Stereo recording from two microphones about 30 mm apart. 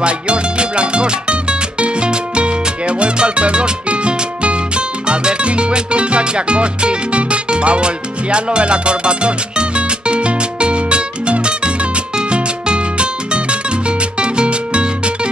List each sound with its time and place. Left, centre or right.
0.0 s music: right